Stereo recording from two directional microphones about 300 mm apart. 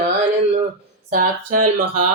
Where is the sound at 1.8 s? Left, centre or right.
Right.